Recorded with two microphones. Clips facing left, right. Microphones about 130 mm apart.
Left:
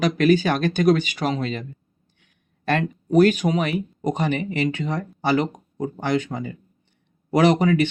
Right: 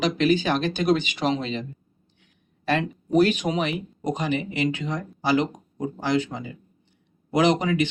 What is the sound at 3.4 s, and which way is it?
Speech, 15° left (ahead or behind).